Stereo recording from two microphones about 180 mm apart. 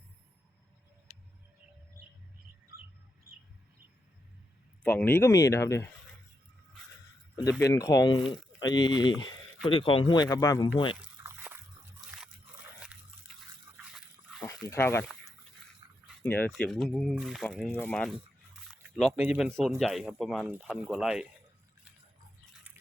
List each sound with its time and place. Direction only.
4.8 s speech: 10° left (ahead or behind)
7.6 s speech: 20° left (ahead or behind)
11.0 s biting: 10° right (ahead or behind)
13.3 s liquid: centre (ahead or behind)
13.9 s a sound: centre (ahead or behind)
14.7 s speech: 15° left (ahead or behind)
15.8 s a sound: 20° right (ahead or behind)
16.2 s speech: 10° left (ahead or behind)
16.5 s speech: centre (ahead or behind)
17.7 s speech: 10° left (ahead or behind)